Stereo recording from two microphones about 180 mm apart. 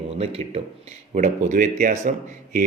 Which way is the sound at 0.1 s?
35° right (ahead or behind).